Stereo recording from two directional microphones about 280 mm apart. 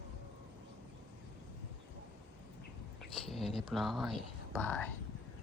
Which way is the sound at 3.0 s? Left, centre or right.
Centre.